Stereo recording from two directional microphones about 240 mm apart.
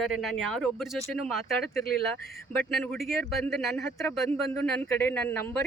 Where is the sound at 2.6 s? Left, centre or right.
Centre.